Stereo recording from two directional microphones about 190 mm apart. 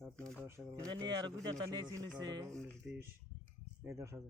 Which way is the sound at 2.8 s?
10° right (ahead or behind).